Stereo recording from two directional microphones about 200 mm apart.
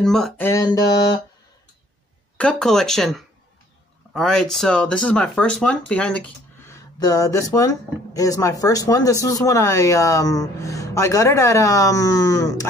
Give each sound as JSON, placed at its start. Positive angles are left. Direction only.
{"t": 0.0, "sound": "speech", "side_deg": 0}
{"t": 0.5, "sound": "a sound", "side_deg": 20}
{"t": 2.3, "sound": "speech", "side_deg": 5}